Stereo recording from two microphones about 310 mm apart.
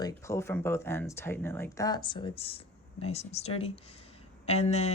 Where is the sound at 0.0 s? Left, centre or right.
Centre.